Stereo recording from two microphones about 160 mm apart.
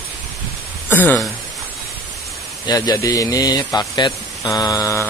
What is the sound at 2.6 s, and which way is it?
Speech, 20° left (ahead or behind).